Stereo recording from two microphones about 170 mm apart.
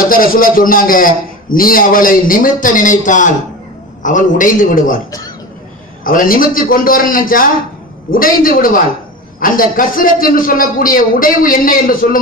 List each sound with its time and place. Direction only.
0.0 s a man's voice: 55° left (ahead or behind)
6.0 s a man's voice: 55° left (ahead or behind)